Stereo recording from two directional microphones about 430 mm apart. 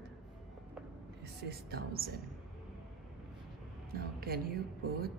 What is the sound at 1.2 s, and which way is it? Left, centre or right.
Speech, right.